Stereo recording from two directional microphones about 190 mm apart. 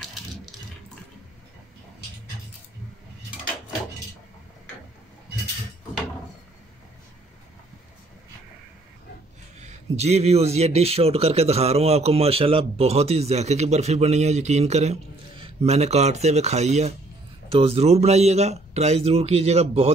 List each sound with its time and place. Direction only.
0.0 s coin: centre (ahead or behind)
9.6 s a man's voice: 35° right (ahead or behind)